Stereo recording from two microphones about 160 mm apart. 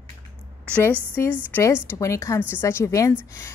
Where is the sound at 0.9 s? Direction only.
10° right (ahead or behind).